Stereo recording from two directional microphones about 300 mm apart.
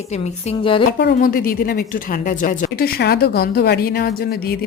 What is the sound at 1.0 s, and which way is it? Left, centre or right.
A woman's voice, left.